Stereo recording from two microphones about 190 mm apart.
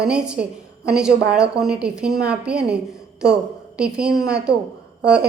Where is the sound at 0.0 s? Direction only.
5° right (ahead or behind).